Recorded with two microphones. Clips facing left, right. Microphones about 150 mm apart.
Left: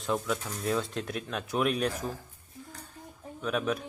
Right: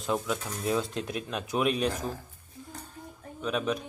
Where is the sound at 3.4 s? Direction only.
5° left (ahead or behind).